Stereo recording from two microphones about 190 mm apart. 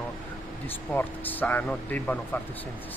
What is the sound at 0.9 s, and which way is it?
A man's voice, 10° left (ahead or behind).